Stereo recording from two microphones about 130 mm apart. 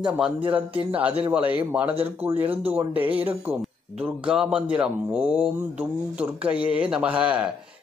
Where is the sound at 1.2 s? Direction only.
10° right (ahead or behind).